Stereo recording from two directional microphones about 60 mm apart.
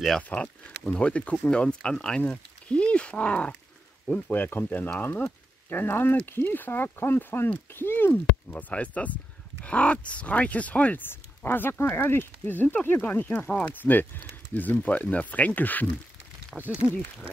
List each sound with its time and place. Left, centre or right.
0.2 s speech: left
4.3 s speech: left
11.1 s speech: left
13.5 s speech: centre
13.8 s speech: left
16.5 s speech: centre